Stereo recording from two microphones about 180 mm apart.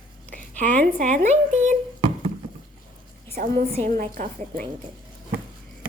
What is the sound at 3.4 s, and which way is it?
A woman's voice, 55° right (ahead or behind).